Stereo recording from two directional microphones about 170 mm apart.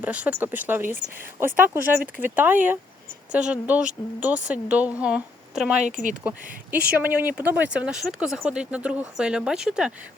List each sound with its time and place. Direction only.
0.0 s a woman's voice: 10° right (ahead or behind)
5.8 s speech: 50° right (ahead or behind)
7.0 s speech: 10° right (ahead or behind)